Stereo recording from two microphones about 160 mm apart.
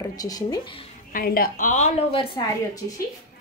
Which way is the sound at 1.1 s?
65° left (ahead or behind).